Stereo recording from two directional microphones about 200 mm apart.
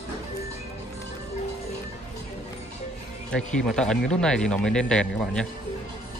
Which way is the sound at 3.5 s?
5° left (ahead or behind).